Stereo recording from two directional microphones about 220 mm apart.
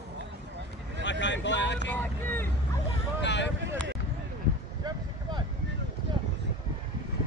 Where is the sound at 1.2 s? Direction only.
55° left (ahead or behind).